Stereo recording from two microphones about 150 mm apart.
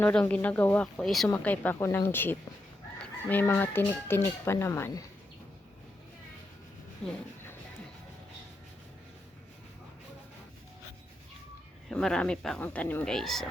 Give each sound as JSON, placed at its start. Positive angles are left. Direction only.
{"t": 0.0, "sound": "fowl", "side_deg": 10}
{"t": 11.9, "sound": "speech", "side_deg": 5}
{"t": 12.6, "sound": "fowl", "side_deg": 10}